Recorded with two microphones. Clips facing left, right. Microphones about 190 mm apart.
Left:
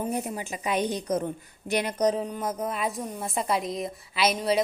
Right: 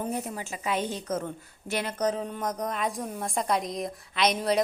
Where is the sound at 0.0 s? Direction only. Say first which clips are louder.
Left 2 dB; 15° left (ahead or behind).